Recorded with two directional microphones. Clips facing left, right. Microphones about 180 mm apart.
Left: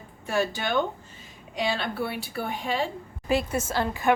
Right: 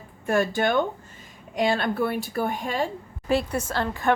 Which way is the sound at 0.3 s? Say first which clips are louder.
Right 4 dB; 50° right (ahead or behind).